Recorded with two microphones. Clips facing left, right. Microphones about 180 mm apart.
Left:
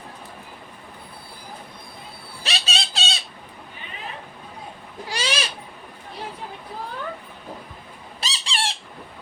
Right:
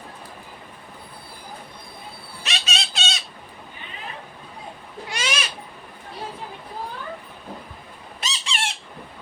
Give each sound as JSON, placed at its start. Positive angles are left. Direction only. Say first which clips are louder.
{"t": 2.4, "sound": "a sound", "louder": "left 1 dB", "side_deg": 35}
{"t": 5.0, "sound": "owl", "louder": "left 2 dB", "side_deg": 35}
{"t": 8.2, "sound": "squeak", "louder": "left 1 dB", "side_deg": 35}